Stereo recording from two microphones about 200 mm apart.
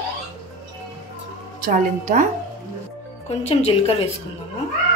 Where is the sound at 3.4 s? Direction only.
30° left (ahead or behind).